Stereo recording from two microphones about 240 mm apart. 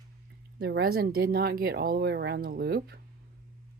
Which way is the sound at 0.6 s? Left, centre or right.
Right.